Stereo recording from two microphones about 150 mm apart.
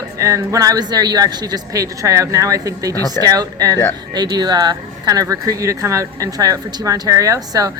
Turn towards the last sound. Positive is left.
turn(degrees=-25)  # may be behind; listen again after turning